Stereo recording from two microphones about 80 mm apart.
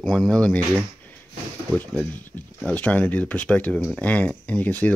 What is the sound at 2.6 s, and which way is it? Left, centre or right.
Speech, centre.